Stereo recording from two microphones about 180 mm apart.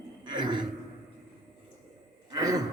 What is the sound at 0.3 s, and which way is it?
Speech, 25° right (ahead or behind).